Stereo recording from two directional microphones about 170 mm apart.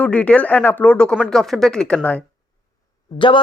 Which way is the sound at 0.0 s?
5° left (ahead or behind).